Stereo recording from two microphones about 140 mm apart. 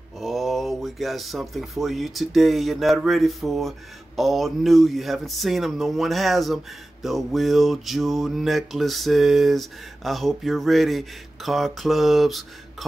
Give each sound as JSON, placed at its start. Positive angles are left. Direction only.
{"t": 0.2, "sound": "speech", "side_deg": 0}